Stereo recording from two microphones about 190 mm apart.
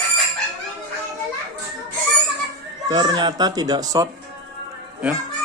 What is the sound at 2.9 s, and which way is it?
Speech, 20° right (ahead or behind).